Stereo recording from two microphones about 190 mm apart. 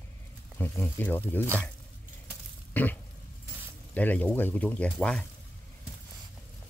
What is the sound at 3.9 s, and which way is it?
Speech, 10° left (ahead or behind).